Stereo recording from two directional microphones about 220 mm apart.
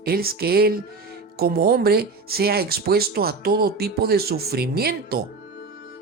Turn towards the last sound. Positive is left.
turn(degrees=-45)  # may be behind; listen again after turning